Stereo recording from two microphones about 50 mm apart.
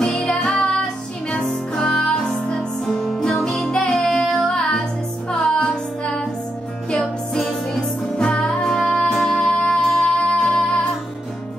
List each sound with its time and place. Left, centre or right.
0.0 s music: centre
1.9 s music: centre